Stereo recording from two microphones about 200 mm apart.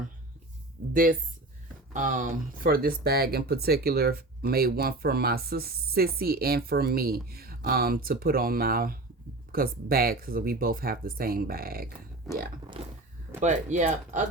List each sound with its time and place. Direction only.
1.9 s speech: 40° right (ahead or behind)
13.4 s speech: 35° right (ahead or behind)